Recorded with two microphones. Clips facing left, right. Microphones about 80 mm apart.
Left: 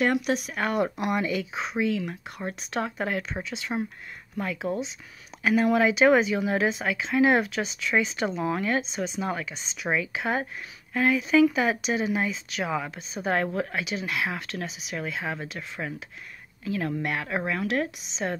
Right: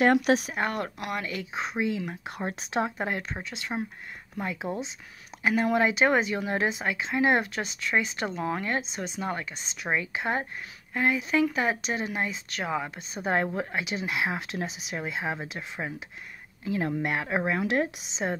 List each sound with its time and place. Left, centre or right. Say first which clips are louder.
0.0 s speech: right 3 dB; right
0.6 s speech: left 1 dB; centre
0.9 s speech: left 6 dB; left
1.2 s a woman's voice: left 4 dB; centre